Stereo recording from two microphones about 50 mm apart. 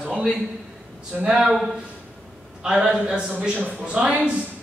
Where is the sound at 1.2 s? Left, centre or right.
Centre.